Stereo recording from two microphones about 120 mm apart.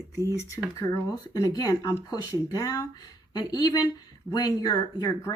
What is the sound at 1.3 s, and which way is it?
Speech, 30° left (ahead or behind).